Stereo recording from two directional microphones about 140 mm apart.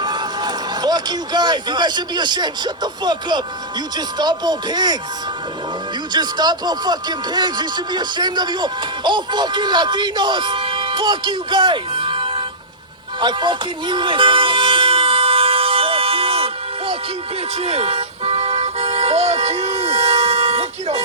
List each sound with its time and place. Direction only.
0.0 s speech: 30° right (ahead or behind)
6.1 s speech: 30° right (ahead or behind)
13.1 s toot: 35° right (ahead or behind)